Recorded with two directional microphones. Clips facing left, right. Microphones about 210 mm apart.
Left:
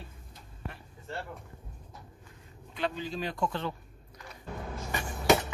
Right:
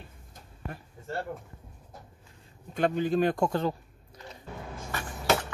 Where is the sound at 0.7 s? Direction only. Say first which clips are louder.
Right 4 dB; 45° right (ahead or behind).